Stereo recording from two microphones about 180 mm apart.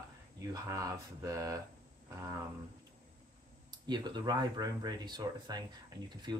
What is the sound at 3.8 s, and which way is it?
Speech, 25° right (ahead or behind).